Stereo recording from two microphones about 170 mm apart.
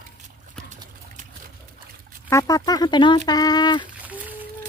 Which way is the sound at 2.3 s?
20° left (ahead or behind).